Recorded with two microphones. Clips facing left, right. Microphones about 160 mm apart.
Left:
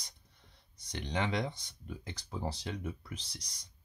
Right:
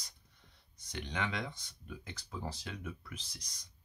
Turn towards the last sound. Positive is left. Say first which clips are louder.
# left 3 dB
turn(degrees=35)  # may be behind; listen again after turning